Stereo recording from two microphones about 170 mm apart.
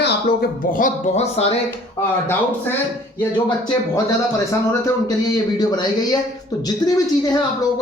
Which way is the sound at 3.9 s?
20° left (ahead or behind).